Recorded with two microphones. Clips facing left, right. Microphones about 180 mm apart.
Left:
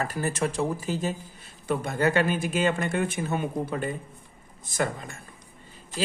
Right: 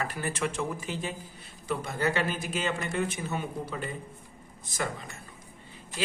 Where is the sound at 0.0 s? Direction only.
40° left (ahead or behind).